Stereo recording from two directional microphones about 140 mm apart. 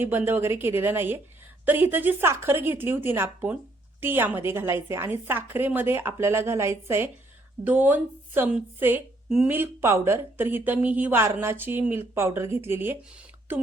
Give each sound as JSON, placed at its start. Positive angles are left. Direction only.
{"t": 0.0, "sound": "a woman's voice", "side_deg": -15}
{"t": 9.6, "sound": "a woman's voice", "side_deg": -20}